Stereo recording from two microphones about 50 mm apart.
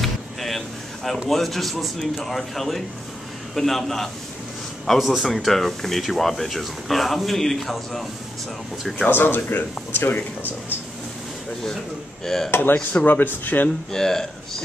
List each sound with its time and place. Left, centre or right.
0.0 s a sound: centre
1.2 s speech: centre
9.1 s speech: left
12.4 s speech: left
13.9 s speech: centre